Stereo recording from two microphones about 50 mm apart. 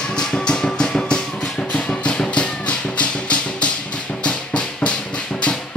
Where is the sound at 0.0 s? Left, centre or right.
Centre.